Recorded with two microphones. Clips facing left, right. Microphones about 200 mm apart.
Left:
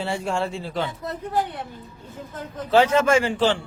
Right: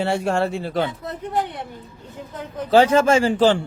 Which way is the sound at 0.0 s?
65° right (ahead or behind).